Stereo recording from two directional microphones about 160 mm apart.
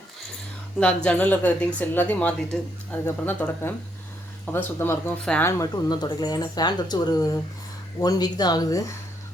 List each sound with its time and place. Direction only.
0.8 s a woman's voice: 5° left (ahead or behind)
5.5 s speech: 20° left (ahead or behind)